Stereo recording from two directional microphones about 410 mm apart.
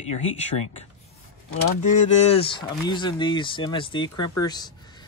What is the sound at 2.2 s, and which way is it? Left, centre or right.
Speech, centre.